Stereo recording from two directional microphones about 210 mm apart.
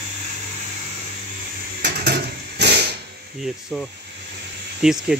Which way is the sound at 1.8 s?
50° right (ahead or behind).